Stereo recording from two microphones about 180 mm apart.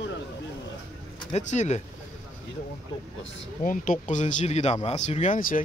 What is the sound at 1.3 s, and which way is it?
Speech, 40° left (ahead or behind).